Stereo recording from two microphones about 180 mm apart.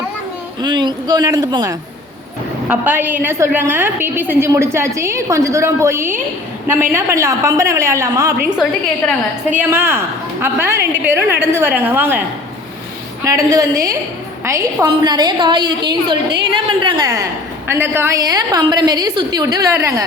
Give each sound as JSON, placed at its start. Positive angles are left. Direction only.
{"t": 0.6, "sound": "a woman's voice", "side_deg": -25}
{"t": 2.6, "sound": "a woman's voice", "side_deg": -10}
{"t": 9.6, "sound": "a woman's voice", "side_deg": -10}
{"t": 13.2, "sound": "a woman's voice", "side_deg": -20}